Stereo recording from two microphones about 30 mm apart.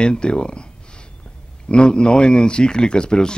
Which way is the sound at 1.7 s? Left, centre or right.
Left.